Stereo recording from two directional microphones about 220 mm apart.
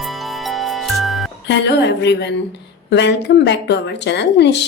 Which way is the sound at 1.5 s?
50° left (ahead or behind).